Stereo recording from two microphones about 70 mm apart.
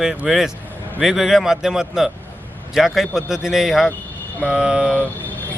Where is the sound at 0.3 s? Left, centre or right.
Centre.